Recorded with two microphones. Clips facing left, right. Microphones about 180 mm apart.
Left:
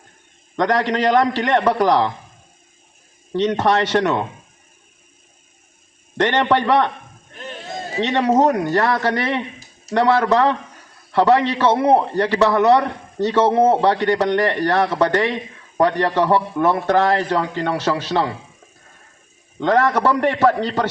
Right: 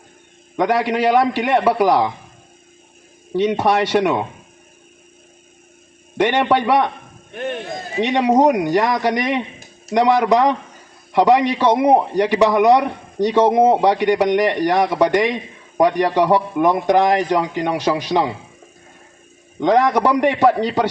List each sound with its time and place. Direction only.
0.5 s a man's voice: 10° right (ahead or behind)
3.3 s a man's voice: 10° right (ahead or behind)
6.1 s a man's voice: 10° right (ahead or behind)
7.3 s a sound: 65° right (ahead or behind)
8.0 s a man's voice: 10° right (ahead or behind)
19.5 s a man's voice: 15° right (ahead or behind)